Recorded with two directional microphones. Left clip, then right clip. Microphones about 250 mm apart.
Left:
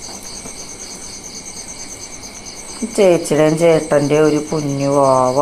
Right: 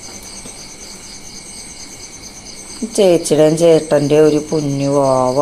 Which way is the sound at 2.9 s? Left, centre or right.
Centre.